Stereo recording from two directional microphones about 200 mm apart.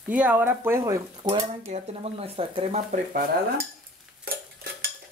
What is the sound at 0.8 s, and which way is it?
Speech, 20° right (ahead or behind).